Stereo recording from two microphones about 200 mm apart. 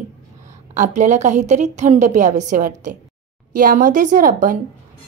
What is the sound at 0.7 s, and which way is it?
A woman's voice, 35° right (ahead or behind).